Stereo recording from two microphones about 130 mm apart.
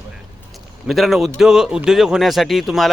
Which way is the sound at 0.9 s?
Centre (ahead or behind).